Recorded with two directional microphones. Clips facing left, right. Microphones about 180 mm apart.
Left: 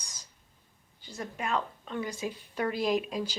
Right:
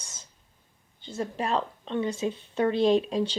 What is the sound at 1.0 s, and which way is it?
Speech, 30° right (ahead or behind).